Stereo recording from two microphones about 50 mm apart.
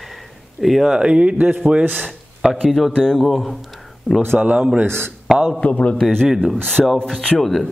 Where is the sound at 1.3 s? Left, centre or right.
Right.